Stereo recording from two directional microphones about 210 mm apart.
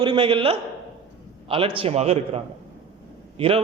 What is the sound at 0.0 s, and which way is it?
A man's voice, 25° right (ahead or behind).